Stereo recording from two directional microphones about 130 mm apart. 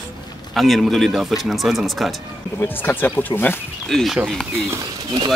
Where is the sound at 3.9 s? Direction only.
Centre (ahead or behind).